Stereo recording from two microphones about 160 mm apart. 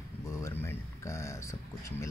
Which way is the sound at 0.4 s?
15° left (ahead or behind).